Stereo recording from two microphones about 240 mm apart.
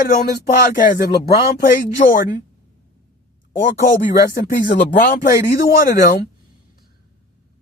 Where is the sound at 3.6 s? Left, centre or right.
Left.